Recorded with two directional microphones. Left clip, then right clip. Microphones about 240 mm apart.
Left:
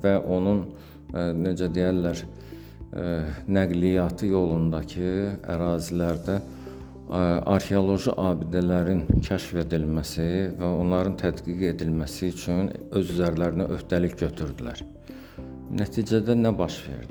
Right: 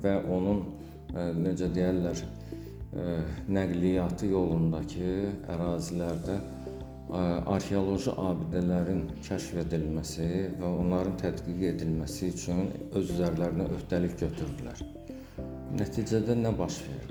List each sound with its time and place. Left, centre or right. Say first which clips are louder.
0.0 s speech: left 6 dB; left
15.7 s speech: left 5 dB; left